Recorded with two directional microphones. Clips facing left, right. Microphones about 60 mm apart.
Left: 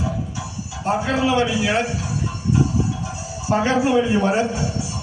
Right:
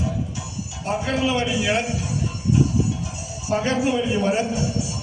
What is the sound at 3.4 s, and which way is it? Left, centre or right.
A man's voice, left.